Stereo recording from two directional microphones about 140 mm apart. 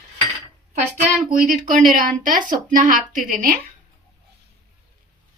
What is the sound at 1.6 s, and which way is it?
Speech, 70° right (ahead or behind).